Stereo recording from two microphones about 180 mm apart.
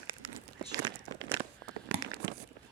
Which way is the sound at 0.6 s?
20° right (ahead or behind).